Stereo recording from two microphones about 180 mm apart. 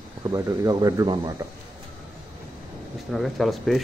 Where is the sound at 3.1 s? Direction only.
Centre (ahead or behind).